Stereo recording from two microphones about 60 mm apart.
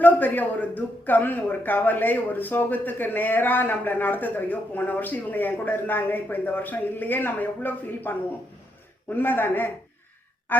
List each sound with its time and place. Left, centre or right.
0.0 s a man's voice: left